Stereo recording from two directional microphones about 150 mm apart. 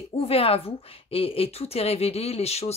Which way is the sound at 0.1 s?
40° left (ahead or behind).